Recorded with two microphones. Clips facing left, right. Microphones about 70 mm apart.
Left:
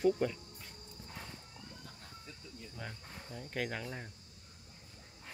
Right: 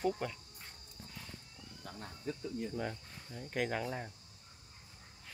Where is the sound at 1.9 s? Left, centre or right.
Right.